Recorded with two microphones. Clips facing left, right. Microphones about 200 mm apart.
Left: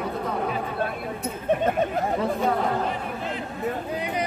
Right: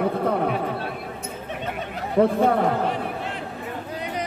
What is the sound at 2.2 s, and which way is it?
Speech, 60° right (ahead or behind).